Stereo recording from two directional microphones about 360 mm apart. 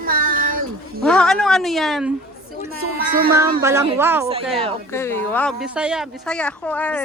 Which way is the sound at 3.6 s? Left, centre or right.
Centre.